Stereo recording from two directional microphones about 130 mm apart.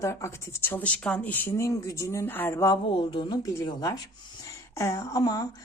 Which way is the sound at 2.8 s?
40° left (ahead or behind).